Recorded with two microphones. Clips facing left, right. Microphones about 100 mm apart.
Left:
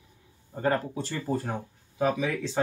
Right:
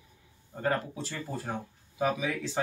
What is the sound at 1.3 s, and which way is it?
Speech, 50° left (ahead or behind).